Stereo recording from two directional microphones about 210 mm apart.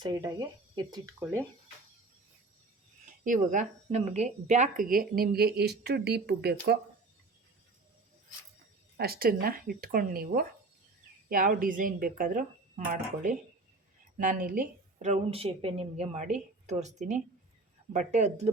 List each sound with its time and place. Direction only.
0.0 s speech: 20° right (ahead or behind)
3.2 s speech: 35° right (ahead or behind)
9.0 s a woman's voice: 45° right (ahead or behind)